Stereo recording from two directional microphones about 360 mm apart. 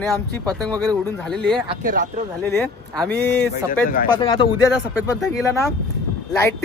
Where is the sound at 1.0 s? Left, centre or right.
Centre.